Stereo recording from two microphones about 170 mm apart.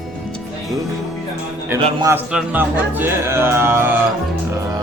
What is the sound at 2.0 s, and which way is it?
Speech, 10° right (ahead or behind).